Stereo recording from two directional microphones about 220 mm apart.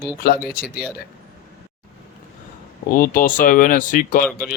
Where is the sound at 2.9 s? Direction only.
40° left (ahead or behind).